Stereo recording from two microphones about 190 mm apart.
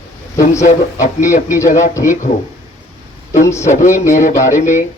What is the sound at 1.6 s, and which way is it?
Speech, 15° left (ahead or behind).